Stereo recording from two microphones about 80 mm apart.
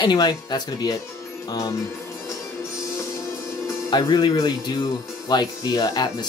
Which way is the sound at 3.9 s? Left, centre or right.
Left.